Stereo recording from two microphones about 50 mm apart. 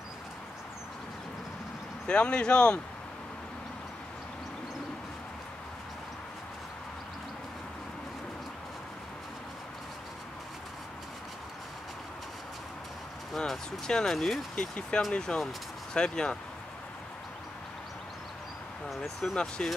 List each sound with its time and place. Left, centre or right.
2.0 s speech: centre
13.4 s speech: centre
14.5 s speech: centre
19.2 s speech: centre